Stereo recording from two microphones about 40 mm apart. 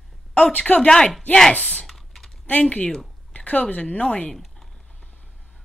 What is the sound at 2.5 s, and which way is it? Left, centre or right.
A woman's voice, left.